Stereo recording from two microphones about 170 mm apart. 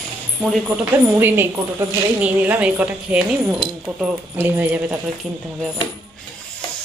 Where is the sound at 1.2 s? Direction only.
15° right (ahead or behind).